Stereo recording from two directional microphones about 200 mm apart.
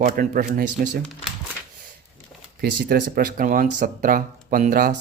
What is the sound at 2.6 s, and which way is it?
Speech, 50° right (ahead or behind).